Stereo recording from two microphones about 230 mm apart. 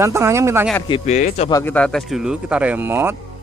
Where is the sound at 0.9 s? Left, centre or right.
Left.